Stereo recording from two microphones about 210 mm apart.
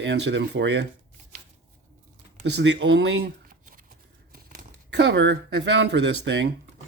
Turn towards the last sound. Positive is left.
turn(degrees=-55)  # may be behind; listen again after turning